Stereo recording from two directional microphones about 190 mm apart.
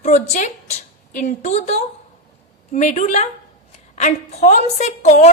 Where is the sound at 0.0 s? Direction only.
40° left (ahead or behind).